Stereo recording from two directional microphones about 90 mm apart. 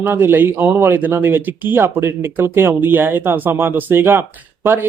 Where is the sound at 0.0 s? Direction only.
25° right (ahead or behind).